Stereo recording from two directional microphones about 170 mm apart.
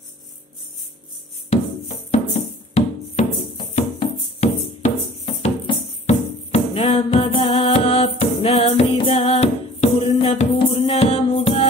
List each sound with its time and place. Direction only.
2.7 s music: 40° left (ahead or behind)